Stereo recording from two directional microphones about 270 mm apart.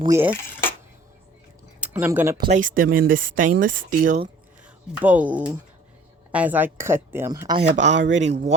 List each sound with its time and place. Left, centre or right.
0.1 s speech: centre
1.8 s speech: centre
2.5 s speech: right
4.9 s speech: centre
7.8 s speech: right
8.2 s speech: right